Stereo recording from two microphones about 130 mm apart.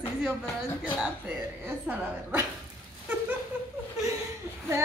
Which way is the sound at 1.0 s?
10° right (ahead or behind).